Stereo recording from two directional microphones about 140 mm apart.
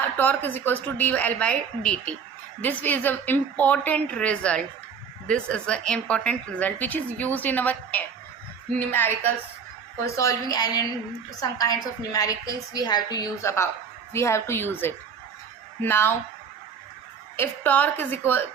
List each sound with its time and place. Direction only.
0.2 s a woman's voice: 15° left (ahead or behind)
10.2 s a woman's voice: 25° left (ahead or behind)
17.3 s a woman's voice: 15° left (ahead or behind)